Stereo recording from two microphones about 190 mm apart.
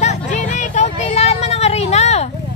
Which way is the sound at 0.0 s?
40° left (ahead or behind).